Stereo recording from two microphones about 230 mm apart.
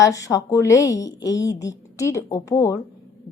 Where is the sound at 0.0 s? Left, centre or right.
Centre.